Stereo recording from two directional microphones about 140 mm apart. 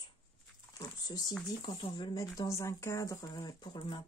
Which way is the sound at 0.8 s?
30° left (ahead or behind).